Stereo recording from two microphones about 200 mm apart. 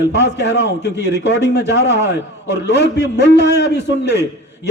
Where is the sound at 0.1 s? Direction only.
60° left (ahead or behind).